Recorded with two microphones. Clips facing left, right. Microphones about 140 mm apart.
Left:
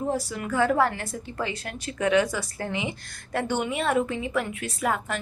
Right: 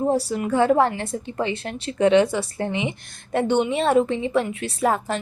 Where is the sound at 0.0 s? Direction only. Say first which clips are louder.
Right 7 dB; 30° right (ahead or behind).